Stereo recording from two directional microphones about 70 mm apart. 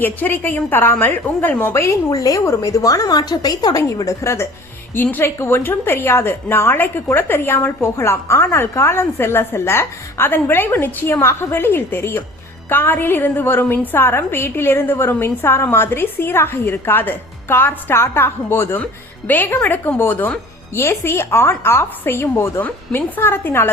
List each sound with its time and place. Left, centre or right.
0.0 s a woman's voice: left
2.0 s a woman's voice: left
3.8 s a woman's voice: left
5.4 s a woman's voice: left
20.7 s a woman's voice: left